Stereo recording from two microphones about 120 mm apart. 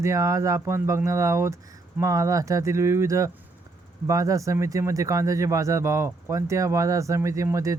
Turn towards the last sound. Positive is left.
turn(degrees=-25)  # may be behind; listen again after turning